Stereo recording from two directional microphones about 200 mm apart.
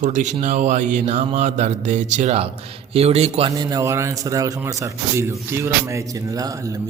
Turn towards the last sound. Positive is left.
turn(degrees=-15)  # may be behind; listen again after turning